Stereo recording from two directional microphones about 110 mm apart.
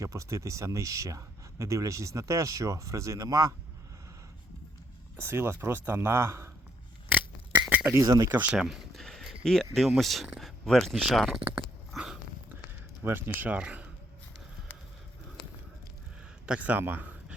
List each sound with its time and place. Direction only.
0.0 s speech: 30° right (ahead or behind)
5.1 s speech: 20° right (ahead or behind)
7.1 s a sound: 15° right (ahead or behind)
8.0 s speech: 35° right (ahead or behind)
8.3 s speech: 15° right (ahead or behind)
8.5 s a sound: 5° right (ahead or behind)
9.4 s speech: 5° left (ahead or behind)
11.9 s biting: 5° right (ahead or behind)
13.0 s speech: 20° right (ahead or behind)
16.5 s speech: 15° right (ahead or behind)